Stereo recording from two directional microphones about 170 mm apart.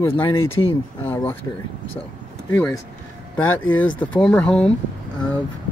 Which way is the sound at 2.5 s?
10° left (ahead or behind).